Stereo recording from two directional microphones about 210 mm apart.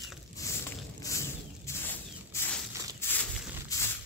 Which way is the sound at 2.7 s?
15° right (ahead or behind).